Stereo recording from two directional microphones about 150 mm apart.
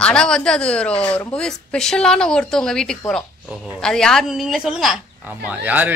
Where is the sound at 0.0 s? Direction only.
5° left (ahead or behind).